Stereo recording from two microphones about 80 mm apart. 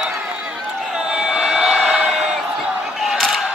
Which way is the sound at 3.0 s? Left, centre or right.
Centre.